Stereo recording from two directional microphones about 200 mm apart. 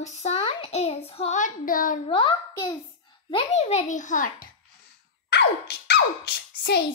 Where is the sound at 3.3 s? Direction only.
30° left (ahead or behind).